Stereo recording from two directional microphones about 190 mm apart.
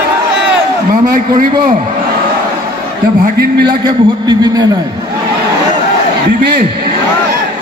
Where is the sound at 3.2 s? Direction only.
55° right (ahead or behind).